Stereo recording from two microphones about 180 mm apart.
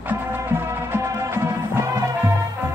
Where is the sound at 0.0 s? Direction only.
10° right (ahead or behind).